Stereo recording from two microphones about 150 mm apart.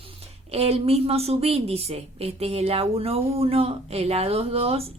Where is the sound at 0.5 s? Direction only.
40° right (ahead or behind).